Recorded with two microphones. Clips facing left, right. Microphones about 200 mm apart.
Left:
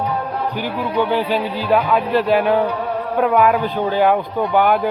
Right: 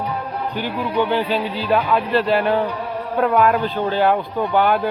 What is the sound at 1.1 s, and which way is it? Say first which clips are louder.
Speech: left 1 dB; 10° left (ahead or behind).